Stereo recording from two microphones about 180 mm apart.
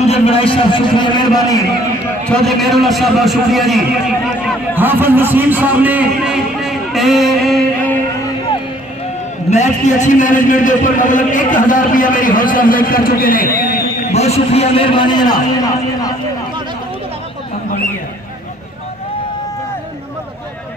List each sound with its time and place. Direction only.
0.0 s a man's voice: 35° left (ahead or behind)
2.2 s a man's voice: 5° left (ahead or behind)
4.7 s a man's voice: 10° right (ahead or behind); by 8.0 s 5° left (ahead or behind)
9.5 s a man's voice: 40° left (ahead or behind)
14.1 s a man's voice: 35° left (ahead or behind); by 16.2 s 20° left (ahead or behind)